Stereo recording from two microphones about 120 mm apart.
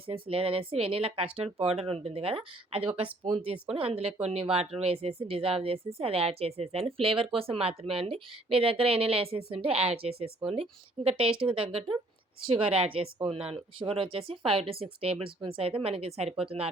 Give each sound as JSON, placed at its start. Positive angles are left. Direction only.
{"t": 0.1, "sound": "speech", "side_deg": -50}